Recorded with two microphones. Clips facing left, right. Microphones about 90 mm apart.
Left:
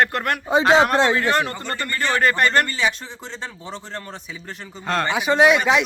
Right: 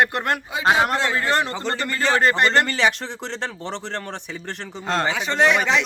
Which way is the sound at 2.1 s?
25° right (ahead or behind).